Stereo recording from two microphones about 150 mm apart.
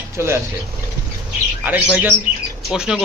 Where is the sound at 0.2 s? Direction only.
15° right (ahead or behind).